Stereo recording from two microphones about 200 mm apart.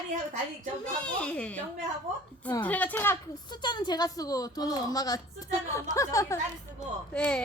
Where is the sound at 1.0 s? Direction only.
5° left (ahead or behind).